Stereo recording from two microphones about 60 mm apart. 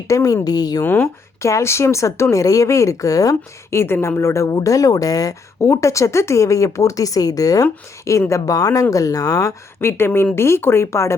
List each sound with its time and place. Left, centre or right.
0.1 s speech: left
0.4 s a woman's voice: left
0.9 s speech: left
1.4 s speech: left
3.7 s speech: left
4.2 s speech: left
5.5 s speech: left
8.3 s speech: left
9.8 s speech: left